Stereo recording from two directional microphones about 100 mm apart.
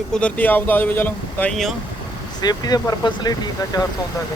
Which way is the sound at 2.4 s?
40° left (ahead or behind).